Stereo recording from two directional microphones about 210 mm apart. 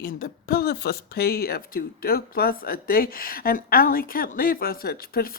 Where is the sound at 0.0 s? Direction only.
45° left (ahead or behind).